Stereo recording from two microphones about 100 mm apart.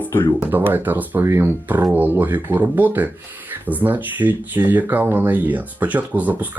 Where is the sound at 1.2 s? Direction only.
30° right (ahead or behind).